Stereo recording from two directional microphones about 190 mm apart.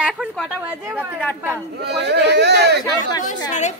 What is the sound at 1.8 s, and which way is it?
Speech, 60° right (ahead or behind).